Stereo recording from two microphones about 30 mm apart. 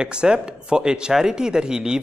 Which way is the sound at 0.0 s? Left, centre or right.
Right.